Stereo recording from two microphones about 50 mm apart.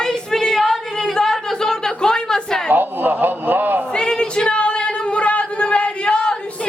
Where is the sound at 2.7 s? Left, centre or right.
Right.